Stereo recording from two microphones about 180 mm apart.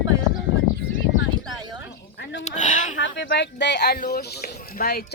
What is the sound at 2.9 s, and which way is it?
Speech, 80° left.